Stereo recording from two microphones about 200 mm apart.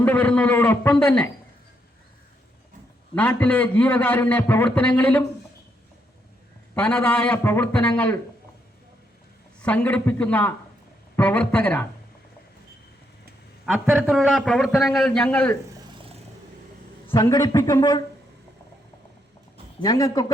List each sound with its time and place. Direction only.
0.0 s a man's voice: 10° left (ahead or behind)
3.2 s a man's voice: 10° left (ahead or behind)
6.7 s a man's voice: 5° left (ahead or behind)
9.6 s a man's voice: 5° left (ahead or behind)
13.7 s a man's voice: 5° right (ahead or behind)
17.1 s a man's voice: 20° left (ahead or behind)
19.8 s a man's voice: 20° left (ahead or behind)